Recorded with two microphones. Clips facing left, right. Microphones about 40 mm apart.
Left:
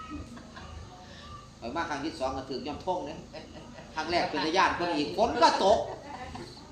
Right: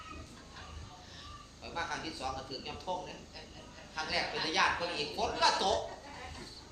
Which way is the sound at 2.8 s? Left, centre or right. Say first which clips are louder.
Left 6 dB; centre.